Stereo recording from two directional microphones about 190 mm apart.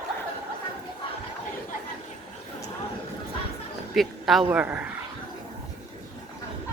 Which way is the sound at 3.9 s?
Centre (ahead or behind).